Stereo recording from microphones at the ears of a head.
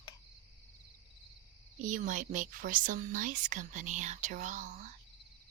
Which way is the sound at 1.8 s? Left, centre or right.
Right.